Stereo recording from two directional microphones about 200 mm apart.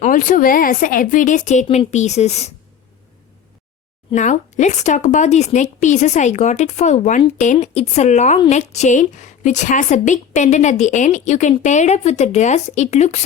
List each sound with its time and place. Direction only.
0.0 s a woman's voice: 40° left (ahead or behind)
4.1 s a woman's voice: 35° left (ahead or behind)